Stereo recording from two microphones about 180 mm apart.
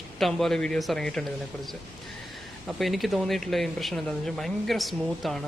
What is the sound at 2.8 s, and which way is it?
Speech, centre (ahead or behind).